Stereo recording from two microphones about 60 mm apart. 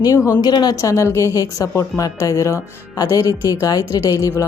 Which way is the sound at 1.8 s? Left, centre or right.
Left.